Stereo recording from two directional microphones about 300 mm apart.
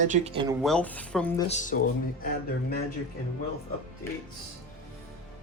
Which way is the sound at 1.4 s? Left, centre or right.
Left.